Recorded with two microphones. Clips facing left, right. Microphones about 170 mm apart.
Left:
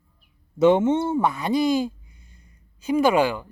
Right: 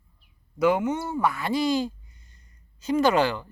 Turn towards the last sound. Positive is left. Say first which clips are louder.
# left 2 dB
turn(degrees=10)  # may be behind; listen again after turning